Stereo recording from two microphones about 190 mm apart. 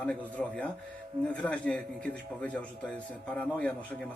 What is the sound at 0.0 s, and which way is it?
Speech, 5° left (ahead or behind).